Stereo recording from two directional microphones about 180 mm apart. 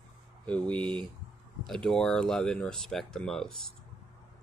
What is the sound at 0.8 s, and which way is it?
Speech, 25° right (ahead or behind).